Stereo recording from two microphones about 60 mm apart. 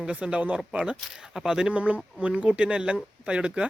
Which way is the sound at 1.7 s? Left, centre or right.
Right.